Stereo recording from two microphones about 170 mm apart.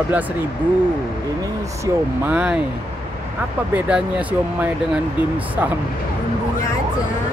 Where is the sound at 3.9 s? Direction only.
5° right (ahead or behind).